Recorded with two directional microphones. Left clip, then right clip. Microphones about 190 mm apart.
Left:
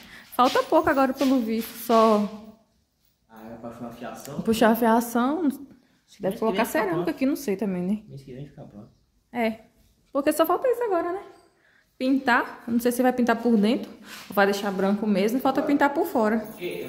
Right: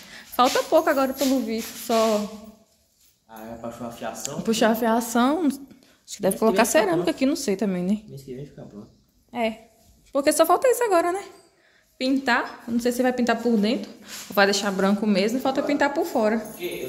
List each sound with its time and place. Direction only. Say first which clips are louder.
0.1 s speech: right 1 dB; 15° left (ahead or behind)
4.0 s speech: right 5 dB; 35° right (ahead or behind)
4.4 s speech: left 1 dB; 20° left (ahead or behind)
5.1 s speech: right 3 dB; 5° right (ahead or behind)
8.3 s speech: right 5 dB; 55° left (ahead or behind)
9.3 s a woman's voice: right 1 dB; 20° left (ahead or behind)
10.1 s a woman's voice: right 3 dB; 10° left (ahead or behind)
10.5 s speech: right 4 dB; 5° right (ahead or behind)
12.0 s a woman's voice: even; 15° left (ahead or behind)
14.3 s speech: right 2 dB; 5° left (ahead or behind)
15.2 s speech: even; 20° left (ahead or behind)